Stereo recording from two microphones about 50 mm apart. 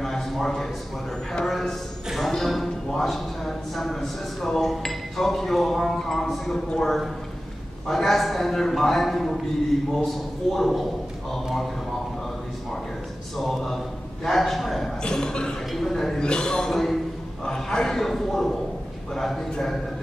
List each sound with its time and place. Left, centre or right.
0.0 s a sound: centre
1.4 s a man's voice: centre
13.4 s a man's voice: centre
15.0 s a woman's voice: centre
16.2 s a man's voice: centre